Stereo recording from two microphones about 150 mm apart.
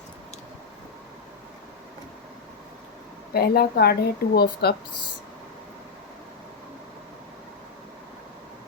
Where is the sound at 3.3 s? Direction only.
90° left.